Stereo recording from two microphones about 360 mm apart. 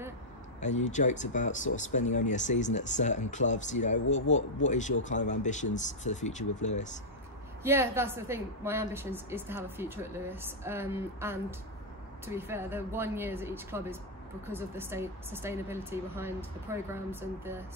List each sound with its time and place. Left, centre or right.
0.6 s speech: centre
7.6 s a woman's voice: centre